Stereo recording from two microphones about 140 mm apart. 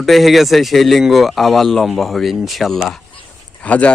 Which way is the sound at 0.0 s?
Centre (ahead or behind).